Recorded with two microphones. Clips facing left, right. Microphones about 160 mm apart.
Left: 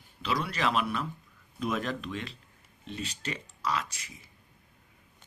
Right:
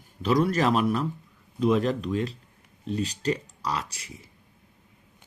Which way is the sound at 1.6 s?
30° right (ahead or behind).